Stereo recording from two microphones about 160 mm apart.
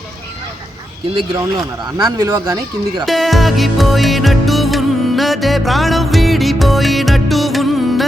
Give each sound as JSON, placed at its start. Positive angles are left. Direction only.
{"t": 1.1, "sound": "speech", "side_deg": -25}
{"t": 3.1, "sound": "music", "side_deg": 0}